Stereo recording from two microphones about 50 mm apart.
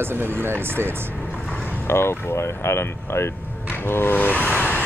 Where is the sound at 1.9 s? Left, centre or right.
Left.